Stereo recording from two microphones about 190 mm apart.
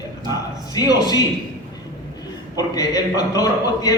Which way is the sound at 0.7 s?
20° left (ahead or behind).